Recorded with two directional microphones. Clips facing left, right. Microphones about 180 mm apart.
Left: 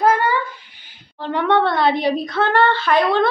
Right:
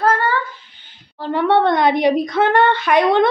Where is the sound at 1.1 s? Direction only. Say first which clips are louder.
Right 2 dB; 5° right (ahead or behind).